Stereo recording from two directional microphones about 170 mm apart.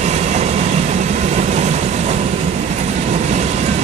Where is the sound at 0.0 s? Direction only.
40° right (ahead or behind).